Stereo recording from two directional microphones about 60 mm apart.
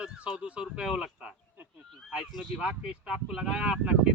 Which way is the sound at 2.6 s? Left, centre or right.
Centre.